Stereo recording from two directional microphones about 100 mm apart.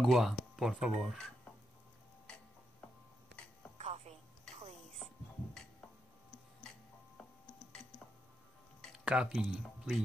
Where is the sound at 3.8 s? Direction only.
90° right.